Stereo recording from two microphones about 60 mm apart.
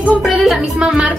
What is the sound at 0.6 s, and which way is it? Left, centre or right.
Speech, centre.